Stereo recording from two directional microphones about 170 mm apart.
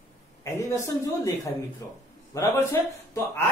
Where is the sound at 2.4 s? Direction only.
15° left (ahead or behind).